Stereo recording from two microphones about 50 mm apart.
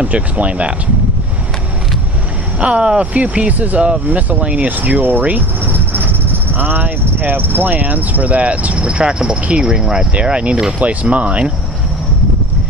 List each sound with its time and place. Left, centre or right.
0.0 s speech: right
2.6 s speech: right